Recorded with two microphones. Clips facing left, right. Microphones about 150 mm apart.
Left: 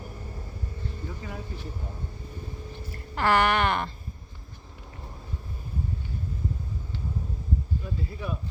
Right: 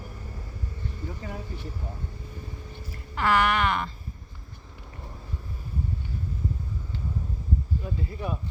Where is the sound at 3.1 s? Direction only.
35° left (ahead or behind).